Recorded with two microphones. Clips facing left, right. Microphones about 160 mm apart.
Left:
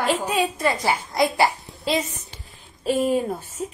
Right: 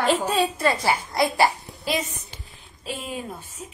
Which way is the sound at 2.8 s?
45° left (ahead or behind).